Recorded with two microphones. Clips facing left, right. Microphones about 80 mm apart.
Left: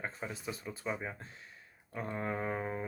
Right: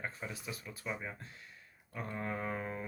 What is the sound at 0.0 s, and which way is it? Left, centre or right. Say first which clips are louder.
Speech: left 3 dB; left.